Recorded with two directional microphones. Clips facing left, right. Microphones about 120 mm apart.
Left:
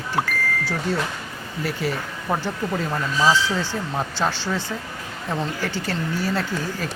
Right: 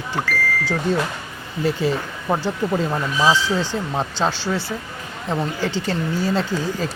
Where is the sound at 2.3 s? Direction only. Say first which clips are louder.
Right 4 dB; 20° right (ahead or behind).